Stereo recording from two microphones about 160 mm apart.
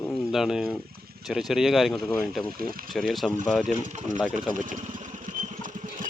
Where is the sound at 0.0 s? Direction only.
Centre (ahead or behind).